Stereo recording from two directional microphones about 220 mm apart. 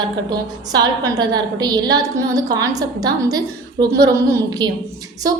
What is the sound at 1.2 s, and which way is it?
A woman's voice, 20° right (ahead or behind).